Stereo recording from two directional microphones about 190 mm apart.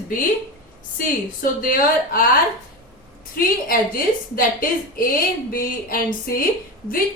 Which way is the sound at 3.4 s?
50° left (ahead or behind).